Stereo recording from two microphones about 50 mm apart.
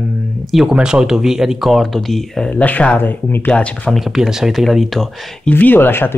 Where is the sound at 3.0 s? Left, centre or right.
Left.